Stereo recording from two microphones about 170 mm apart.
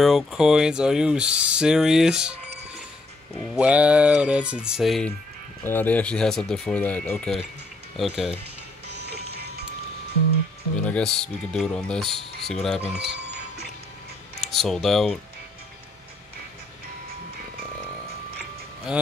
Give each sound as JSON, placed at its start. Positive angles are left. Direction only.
{"t": 0.0, "sound": "speech", "side_deg": 0}
{"t": 3.5, "sound": "speech", "side_deg": -5}
{"t": 5.6, "sound": "speech", "side_deg": 10}
{"t": 8.8, "sound": "music", "side_deg": -80}
{"t": 10.8, "sound": "speech", "side_deg": 5}
{"t": 13.0, "sound": "music", "side_deg": -75}
{"t": 14.4, "sound": "speech", "side_deg": 0}